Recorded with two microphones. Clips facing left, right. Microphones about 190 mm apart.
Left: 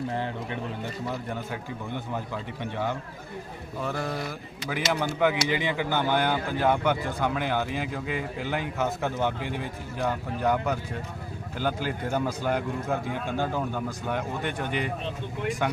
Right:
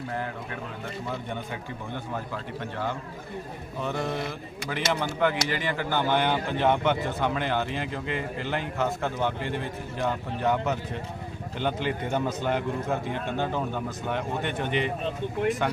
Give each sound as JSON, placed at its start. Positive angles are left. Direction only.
{"t": 0.1, "sound": "speech", "side_deg": 30}
{"t": 1.0, "sound": "a man's voice", "side_deg": 5}